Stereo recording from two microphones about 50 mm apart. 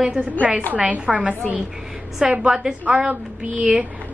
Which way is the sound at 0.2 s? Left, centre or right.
Right.